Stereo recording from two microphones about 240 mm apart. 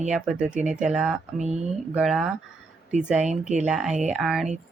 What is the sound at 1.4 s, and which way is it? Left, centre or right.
Speech, right.